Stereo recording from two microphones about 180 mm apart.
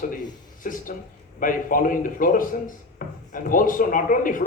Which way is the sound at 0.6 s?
50° left (ahead or behind).